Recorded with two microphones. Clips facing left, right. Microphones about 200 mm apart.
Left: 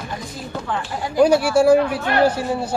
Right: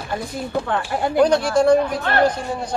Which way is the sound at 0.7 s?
60° right (ahead or behind).